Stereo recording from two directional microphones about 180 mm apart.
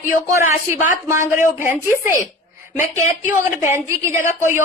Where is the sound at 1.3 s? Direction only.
15° right (ahead or behind).